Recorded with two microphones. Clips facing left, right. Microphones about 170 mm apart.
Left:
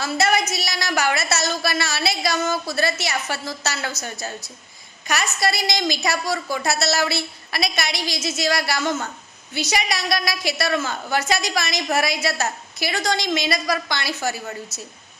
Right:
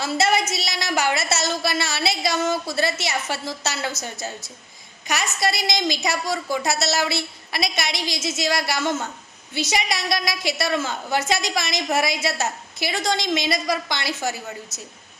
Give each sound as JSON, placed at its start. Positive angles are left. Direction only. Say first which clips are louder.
{"t": 0.0, "sound": "a woman's voice", "louder": "even", "side_deg": -25}